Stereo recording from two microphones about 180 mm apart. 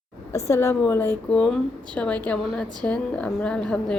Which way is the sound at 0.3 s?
15° left (ahead or behind).